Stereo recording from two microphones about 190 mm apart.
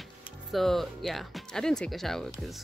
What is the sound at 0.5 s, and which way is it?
Speech, centre (ahead or behind).